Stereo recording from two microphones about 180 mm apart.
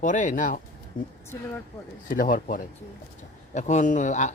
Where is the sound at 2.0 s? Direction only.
50° left (ahead or behind).